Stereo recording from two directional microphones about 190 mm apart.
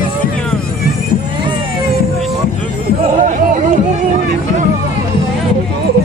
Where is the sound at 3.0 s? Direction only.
40° right (ahead or behind).